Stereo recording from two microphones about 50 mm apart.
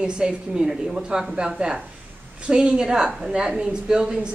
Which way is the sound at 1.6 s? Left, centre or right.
Right.